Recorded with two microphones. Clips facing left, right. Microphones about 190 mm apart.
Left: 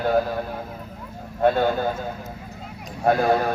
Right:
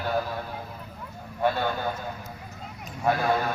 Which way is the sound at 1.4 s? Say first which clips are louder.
Left 6 dB; 45° left (ahead or behind).